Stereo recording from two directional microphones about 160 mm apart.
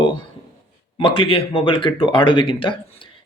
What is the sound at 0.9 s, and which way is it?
A man's voice, 30° left (ahead or behind).